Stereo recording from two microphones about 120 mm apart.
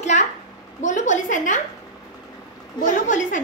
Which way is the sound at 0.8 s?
90° left.